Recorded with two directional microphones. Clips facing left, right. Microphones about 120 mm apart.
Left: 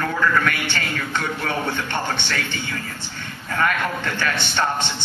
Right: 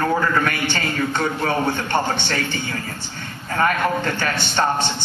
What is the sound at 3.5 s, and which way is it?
A man's voice, 40° right (ahead or behind).